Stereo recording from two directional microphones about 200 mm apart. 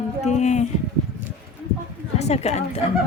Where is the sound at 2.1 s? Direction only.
35° left (ahead or behind).